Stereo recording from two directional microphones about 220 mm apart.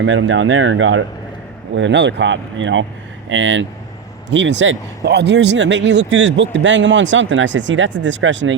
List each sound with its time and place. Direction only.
0.0 s speech: 60° right (ahead or behind)